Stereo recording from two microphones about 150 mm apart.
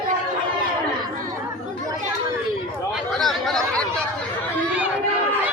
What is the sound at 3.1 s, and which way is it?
Chatter, centre (ahead or behind).